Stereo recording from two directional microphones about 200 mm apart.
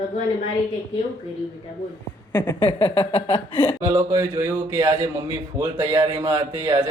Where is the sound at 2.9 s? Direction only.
30° left (ahead or behind).